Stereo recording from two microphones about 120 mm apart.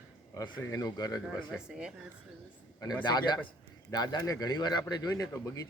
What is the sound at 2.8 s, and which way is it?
Speech, 35° left (ahead or behind).